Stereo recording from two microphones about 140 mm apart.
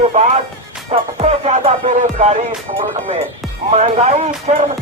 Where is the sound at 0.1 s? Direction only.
55° right (ahead or behind).